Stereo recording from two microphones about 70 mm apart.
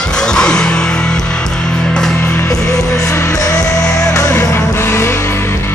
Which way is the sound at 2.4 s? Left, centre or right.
Left.